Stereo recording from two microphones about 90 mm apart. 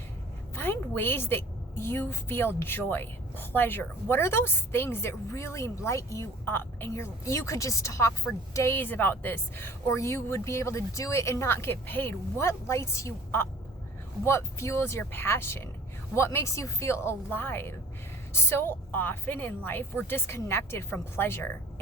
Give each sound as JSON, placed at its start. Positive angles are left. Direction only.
{"t": 0.5, "sound": "a woman's voice", "side_deg": 25}